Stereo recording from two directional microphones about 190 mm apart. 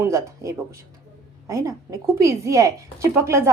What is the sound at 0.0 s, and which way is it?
A woman's voice, 15° right (ahead or behind).